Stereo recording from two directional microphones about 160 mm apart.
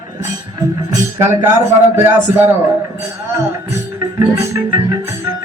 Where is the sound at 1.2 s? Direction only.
15° right (ahead or behind).